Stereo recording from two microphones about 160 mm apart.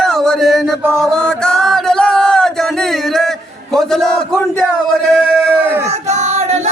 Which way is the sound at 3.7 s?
Centre (ahead or behind).